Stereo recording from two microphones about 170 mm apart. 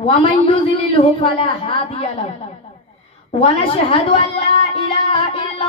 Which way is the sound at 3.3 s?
35° left (ahead or behind).